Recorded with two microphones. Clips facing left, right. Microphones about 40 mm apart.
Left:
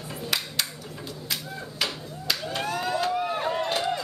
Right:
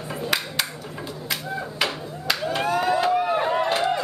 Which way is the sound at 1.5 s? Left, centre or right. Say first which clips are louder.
Right 7 dB; centre.